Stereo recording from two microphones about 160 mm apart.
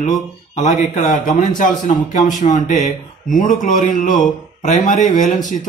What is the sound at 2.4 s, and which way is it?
Speech, 50° left (ahead or behind).